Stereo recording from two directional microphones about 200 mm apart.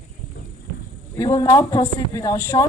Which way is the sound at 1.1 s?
15° left (ahead or behind).